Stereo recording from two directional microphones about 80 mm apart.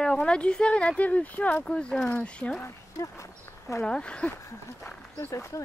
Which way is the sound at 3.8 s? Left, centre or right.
Centre.